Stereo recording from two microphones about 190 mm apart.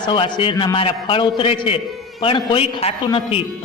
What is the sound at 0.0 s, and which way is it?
A man's voice, 25° left (ahead or behind).